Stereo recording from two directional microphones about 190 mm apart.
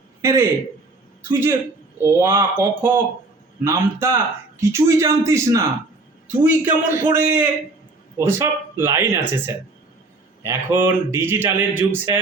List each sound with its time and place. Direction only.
0.2 s a man's voice: 15° right (ahead or behind)
10.4 s a man's voice: 10° right (ahead or behind)